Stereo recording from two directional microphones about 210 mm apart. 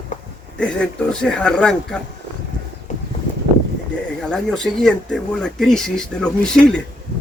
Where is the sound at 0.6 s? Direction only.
5° left (ahead or behind).